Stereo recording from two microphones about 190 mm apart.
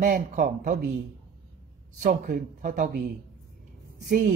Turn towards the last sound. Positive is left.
turn(degrees=-65)  # may be behind; listen again after turning